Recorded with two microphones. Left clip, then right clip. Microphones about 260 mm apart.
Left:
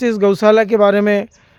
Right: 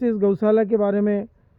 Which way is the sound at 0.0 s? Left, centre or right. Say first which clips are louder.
Left 7 dB; centre.